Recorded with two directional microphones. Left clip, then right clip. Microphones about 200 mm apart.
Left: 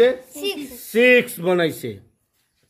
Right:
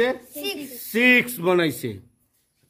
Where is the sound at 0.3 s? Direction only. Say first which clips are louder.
Left 4 dB; centre (ahead or behind).